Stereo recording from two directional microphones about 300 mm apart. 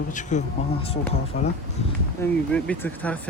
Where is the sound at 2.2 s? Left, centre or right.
Centre.